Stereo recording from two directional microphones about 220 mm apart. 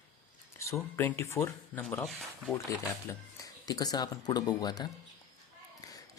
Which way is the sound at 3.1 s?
15° left (ahead or behind).